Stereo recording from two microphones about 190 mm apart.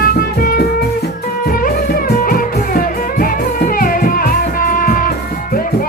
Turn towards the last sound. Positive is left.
turn(degrees=45)  # may be behind; listen again after turning